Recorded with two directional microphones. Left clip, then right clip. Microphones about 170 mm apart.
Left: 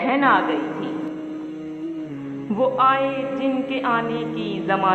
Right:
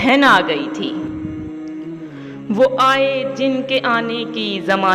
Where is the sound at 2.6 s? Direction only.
35° right (ahead or behind).